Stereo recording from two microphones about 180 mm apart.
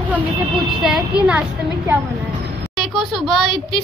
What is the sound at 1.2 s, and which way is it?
Speech, 5° right (ahead or behind).